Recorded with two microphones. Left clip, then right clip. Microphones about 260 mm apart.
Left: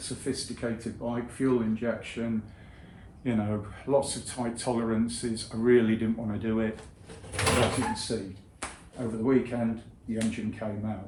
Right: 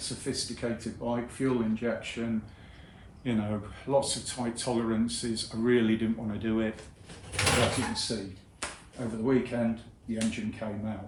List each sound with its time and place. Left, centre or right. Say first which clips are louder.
0.0 s speech: even; centre